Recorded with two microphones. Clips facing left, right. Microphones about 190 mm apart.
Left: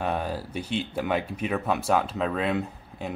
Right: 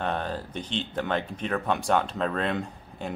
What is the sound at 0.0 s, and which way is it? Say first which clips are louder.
Speech: left 1 dB; 10° left (ahead or behind).